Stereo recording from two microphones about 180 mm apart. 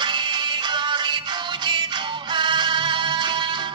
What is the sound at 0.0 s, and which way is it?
Music, 25° right (ahead or behind).